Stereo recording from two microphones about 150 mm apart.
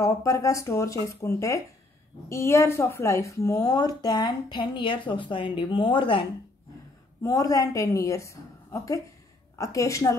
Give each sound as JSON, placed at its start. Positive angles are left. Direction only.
{"t": 0.0, "sound": "a woman's voice", "side_deg": 20}
{"t": 7.2, "sound": "a woman's voice", "side_deg": 25}